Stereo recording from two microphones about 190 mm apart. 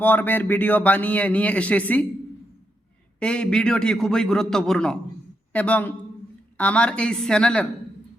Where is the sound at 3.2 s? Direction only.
5° left (ahead or behind).